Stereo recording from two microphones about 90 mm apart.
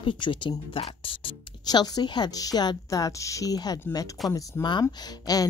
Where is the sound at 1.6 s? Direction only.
50° left (ahead or behind).